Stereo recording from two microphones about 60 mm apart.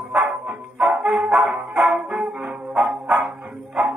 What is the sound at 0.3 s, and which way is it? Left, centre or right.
Music, centre.